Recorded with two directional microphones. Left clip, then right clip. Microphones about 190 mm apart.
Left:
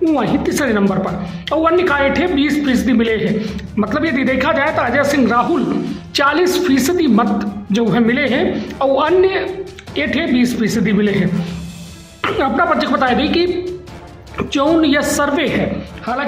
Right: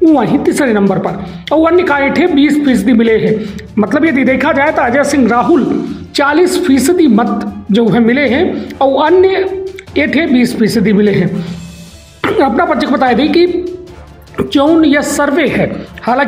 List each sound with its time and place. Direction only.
0.0 s a woman's voice: 20° right (ahead or behind)